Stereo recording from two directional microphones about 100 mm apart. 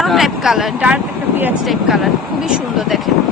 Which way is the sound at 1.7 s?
Centre (ahead or behind).